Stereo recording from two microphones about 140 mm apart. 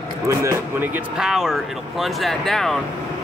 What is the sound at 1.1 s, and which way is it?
Speech, 5° right (ahead or behind).